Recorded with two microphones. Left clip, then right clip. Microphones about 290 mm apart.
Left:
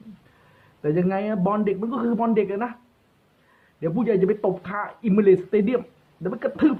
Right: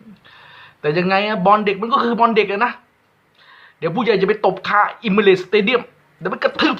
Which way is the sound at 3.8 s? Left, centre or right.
Centre.